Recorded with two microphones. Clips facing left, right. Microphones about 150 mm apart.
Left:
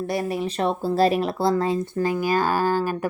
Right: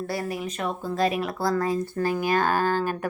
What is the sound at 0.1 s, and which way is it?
Speech, 25° left (ahead or behind).